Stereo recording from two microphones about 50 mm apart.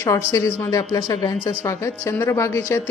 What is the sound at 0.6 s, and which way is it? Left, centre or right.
Speech, left.